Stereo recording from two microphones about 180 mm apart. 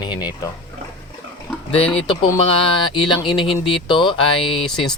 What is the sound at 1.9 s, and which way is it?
Speech, 30° left (ahead or behind).